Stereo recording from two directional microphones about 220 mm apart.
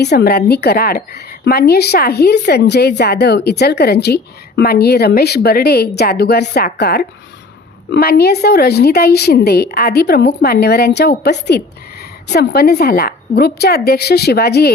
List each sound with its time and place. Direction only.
0.0 s a woman's voice: 50° left (ahead or behind)